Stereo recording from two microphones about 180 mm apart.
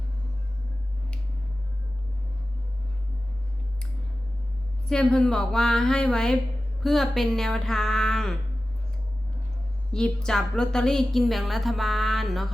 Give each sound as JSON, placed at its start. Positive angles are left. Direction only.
{"t": 4.9, "sound": "a woman's voice", "side_deg": 5}
{"t": 9.9, "sound": "a woman's voice", "side_deg": 5}